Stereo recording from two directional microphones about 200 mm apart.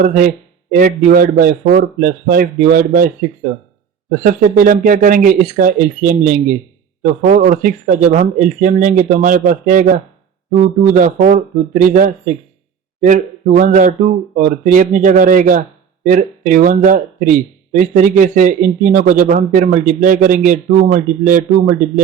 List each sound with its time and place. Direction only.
0.0 s speech: 45° right (ahead or behind)
4.2 s speech: 45° right (ahead or behind)